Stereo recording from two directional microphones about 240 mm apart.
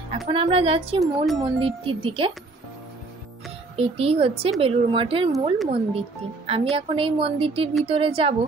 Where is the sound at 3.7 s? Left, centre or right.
Right.